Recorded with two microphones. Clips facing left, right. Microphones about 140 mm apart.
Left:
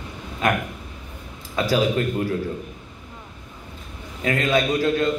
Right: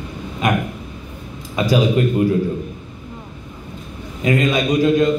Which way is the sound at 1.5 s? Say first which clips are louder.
Right 4 dB; 15° right (ahead or behind).